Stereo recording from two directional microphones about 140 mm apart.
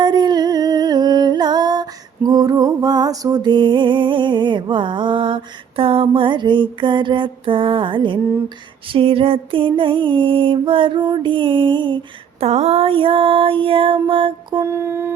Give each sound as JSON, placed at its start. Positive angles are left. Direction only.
{"t": 0.0, "sound": "music", "side_deg": -30}
{"t": 12.4, "sound": "music", "side_deg": -50}
{"t": 14.6, "sound": "a sound", "side_deg": -20}